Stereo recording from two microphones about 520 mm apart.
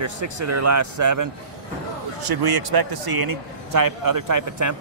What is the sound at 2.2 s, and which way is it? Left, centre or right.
Speech, right.